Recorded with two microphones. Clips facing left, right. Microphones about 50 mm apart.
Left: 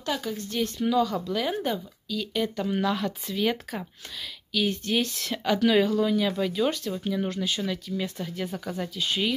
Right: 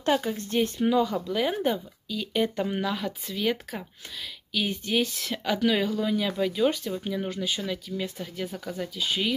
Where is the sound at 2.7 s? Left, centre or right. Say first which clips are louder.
Left 3 dB; centre.